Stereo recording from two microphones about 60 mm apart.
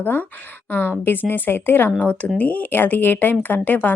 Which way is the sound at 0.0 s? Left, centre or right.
Left.